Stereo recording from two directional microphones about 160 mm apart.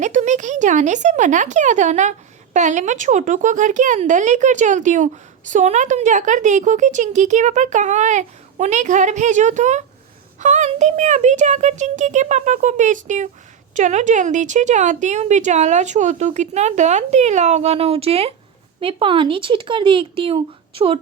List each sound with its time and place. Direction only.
0.0 s speech: 50° right (ahead or behind)